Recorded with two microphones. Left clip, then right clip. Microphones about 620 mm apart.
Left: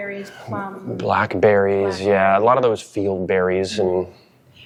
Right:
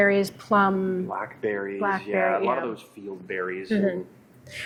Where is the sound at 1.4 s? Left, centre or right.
Left.